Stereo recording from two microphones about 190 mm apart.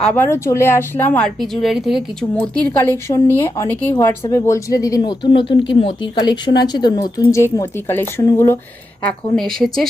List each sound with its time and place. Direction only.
0.0 s a woman's voice: 10° left (ahead or behind)